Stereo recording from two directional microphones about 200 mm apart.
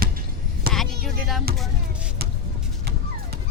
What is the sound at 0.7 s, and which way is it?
Vehicle, centre (ahead or behind).